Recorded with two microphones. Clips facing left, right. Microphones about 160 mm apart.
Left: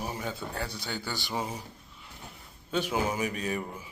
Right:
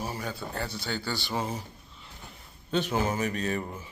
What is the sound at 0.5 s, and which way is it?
Speech, 10° left (ahead or behind).